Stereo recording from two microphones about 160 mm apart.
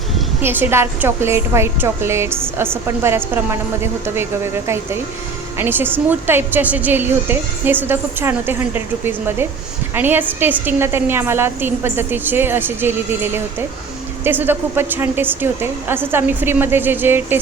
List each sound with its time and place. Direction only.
0.4 s a woman's voice: 15° right (ahead or behind)